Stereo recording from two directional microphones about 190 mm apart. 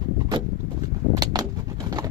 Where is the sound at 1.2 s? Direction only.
20° right (ahead or behind).